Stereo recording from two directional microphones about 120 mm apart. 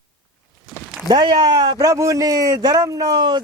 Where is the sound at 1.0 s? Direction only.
40° right (ahead or behind).